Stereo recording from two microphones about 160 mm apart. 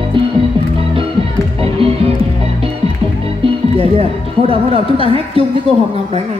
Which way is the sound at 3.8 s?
35° right (ahead or behind).